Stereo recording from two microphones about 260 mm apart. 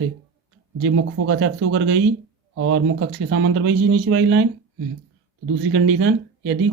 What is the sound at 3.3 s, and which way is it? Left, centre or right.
Speech, right.